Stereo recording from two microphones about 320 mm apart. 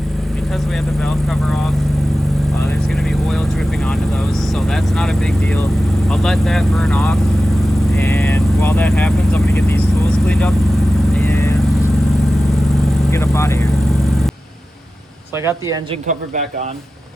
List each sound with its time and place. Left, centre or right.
1.0 s speech: centre
3.1 s vehicle: centre
4.5 s speech: centre
11.1 s vehicle: centre
13.1 s speech: centre
15.4 s speech: centre
16.0 s speech: right